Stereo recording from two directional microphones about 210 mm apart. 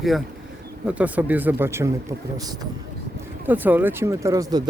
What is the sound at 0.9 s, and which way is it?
Speech, 5° right (ahead or behind).